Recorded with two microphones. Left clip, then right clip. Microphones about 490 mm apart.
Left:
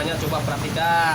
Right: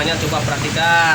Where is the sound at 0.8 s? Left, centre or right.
Left.